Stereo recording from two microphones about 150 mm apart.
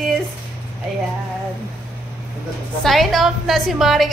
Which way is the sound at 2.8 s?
Centre (ahead or behind).